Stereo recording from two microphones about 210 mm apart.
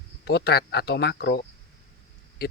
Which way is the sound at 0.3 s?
50° left (ahead or behind).